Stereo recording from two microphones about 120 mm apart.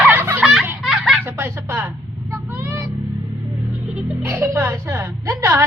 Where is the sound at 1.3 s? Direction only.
20° right (ahead or behind).